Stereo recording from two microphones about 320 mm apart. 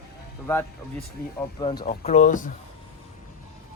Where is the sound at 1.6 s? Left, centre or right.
Centre.